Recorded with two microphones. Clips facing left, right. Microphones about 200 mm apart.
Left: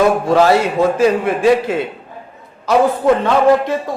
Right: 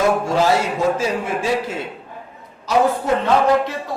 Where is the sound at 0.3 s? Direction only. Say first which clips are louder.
Left 5 dB; 65° left (ahead or behind).